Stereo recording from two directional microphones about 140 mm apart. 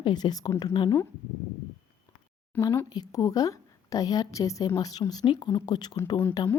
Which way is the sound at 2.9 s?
25° left (ahead or behind).